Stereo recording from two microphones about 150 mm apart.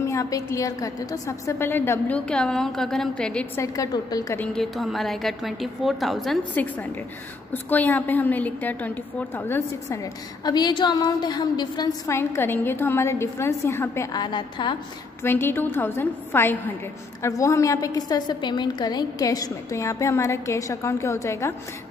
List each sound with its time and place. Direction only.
0.0 s a woman's voice: 20° left (ahead or behind)
3.5 s a woman's voice: 20° left (ahead or behind)
4.4 s a woman's voice: centre (ahead or behind)
6.5 s a woman's voice: 10° left (ahead or behind)
10.4 s a woman's voice: 30° left (ahead or behind)
12.2 s a woman's voice: 15° left (ahead or behind)
14.2 s a woman's voice: 30° left (ahead or behind)
15.2 s a woman's voice: 15° left (ahead or behind)